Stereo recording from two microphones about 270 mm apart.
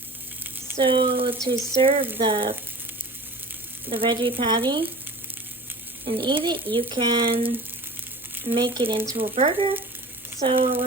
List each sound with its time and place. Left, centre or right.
0.8 s speech: centre
3.8 s speech: centre
6.1 s speech: centre
8.5 s speech: centre